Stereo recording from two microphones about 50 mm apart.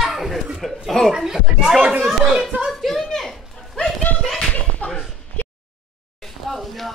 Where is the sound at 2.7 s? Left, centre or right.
Centre.